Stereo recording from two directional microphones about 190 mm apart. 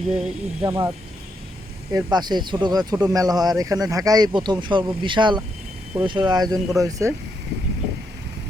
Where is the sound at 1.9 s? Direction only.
20° right (ahead or behind).